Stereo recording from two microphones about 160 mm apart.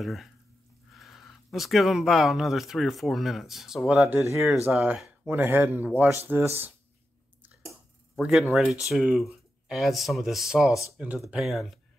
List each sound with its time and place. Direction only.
0.0 s speech: centre (ahead or behind)
8.2 s speech: centre (ahead or behind)